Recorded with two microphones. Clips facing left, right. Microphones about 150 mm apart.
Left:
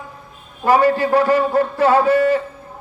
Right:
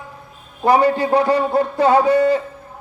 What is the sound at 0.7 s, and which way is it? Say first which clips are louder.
A man's voice: even; 15° right (ahead or behind).